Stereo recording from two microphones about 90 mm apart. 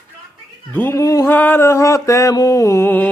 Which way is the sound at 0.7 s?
20° left (ahead or behind).